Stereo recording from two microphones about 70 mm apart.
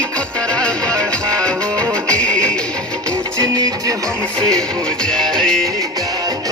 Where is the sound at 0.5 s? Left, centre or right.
Centre.